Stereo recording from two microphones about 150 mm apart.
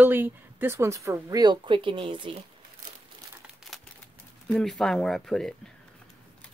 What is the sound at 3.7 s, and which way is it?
Crumpling, centre (ahead or behind).